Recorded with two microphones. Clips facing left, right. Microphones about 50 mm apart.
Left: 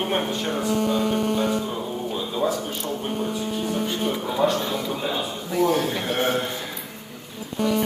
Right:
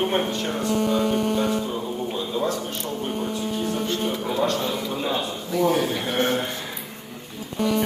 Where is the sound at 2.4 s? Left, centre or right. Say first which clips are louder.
Left 1 dB; centre.